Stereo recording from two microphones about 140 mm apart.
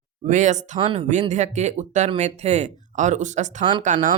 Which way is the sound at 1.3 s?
55° right (ahead or behind).